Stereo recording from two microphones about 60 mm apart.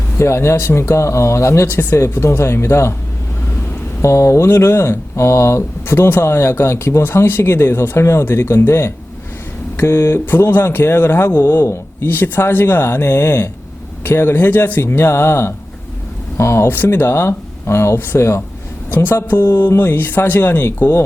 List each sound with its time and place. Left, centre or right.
0.2 s speech: left
1.6 s speech: left
4.0 s speech: left
12.0 s speech: left